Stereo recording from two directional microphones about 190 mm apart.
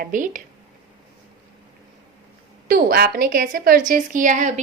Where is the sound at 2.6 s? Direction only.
55° right (ahead or behind).